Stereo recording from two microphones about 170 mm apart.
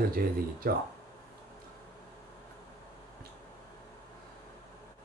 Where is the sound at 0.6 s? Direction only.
60° right (ahead or behind).